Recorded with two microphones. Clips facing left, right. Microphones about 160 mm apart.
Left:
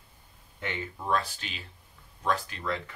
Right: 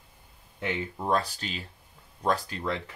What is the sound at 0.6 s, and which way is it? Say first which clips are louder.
Speech: right 4 dB; 35° right (ahead or behind).